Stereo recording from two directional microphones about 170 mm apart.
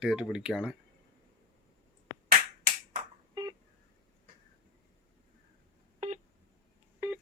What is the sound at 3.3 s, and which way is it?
Telephone dialing, 20° right (ahead or behind).